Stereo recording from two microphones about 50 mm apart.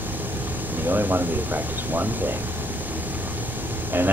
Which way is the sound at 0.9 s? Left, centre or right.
Right.